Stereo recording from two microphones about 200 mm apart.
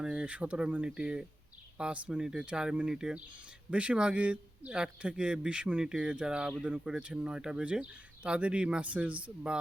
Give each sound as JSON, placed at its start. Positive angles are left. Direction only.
{"t": 0.0, "sound": "speech", "side_deg": -5}